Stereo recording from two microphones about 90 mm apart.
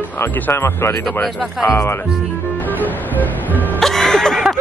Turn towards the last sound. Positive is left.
turn(degrees=5)  # may be behind; listen again after turning